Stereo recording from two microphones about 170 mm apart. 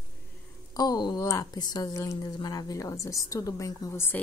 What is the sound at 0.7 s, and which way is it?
A woman's voice, 25° left (ahead or behind).